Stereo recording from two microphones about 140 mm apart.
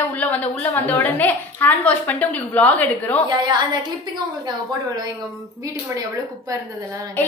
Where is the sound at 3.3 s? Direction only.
35° right (ahead or behind).